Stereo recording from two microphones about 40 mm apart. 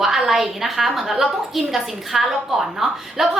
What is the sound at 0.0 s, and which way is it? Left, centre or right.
A woman's voice, centre.